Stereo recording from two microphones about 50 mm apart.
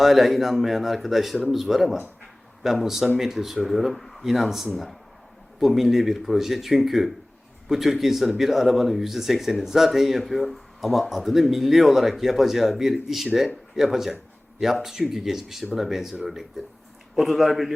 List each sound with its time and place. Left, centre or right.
0.0 s speech: centre